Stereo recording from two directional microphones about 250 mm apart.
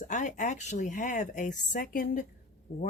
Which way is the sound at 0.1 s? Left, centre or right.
Left.